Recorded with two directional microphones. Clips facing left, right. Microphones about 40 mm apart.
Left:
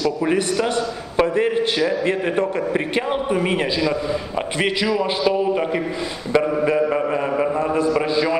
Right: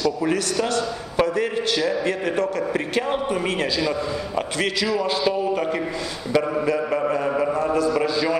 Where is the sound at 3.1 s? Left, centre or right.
Centre.